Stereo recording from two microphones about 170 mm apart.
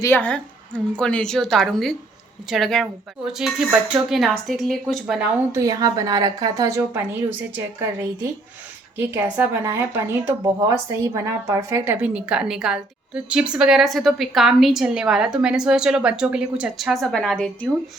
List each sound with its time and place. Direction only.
0.0 s a woman's voice: 10° left (ahead or behind)
5.5 s a woman's voice: 20° right (ahead or behind); by 17.7 s 5° left (ahead or behind)